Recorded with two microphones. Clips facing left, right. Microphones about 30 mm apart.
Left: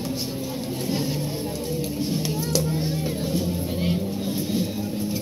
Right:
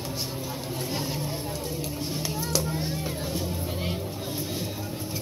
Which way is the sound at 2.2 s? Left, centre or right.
Left.